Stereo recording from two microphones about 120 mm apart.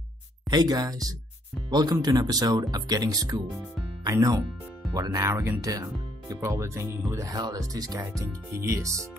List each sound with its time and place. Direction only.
0.5 s speech: 35° right (ahead or behind)
5.3 s speech: 15° right (ahead or behind)
5.6 s speech: 30° right (ahead or behind)